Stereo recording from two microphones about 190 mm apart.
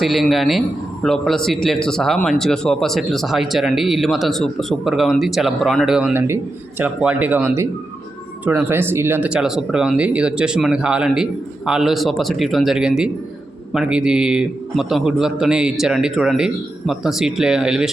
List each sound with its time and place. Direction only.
0.0 s speech: centre (ahead or behind)